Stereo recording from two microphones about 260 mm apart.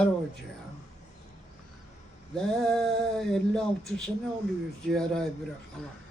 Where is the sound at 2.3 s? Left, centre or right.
Centre.